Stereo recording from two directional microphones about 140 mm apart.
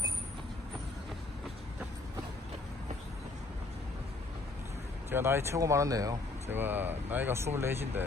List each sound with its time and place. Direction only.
5.1 s speech: 15° right (ahead or behind)
6.6 s speech: 15° right (ahead or behind)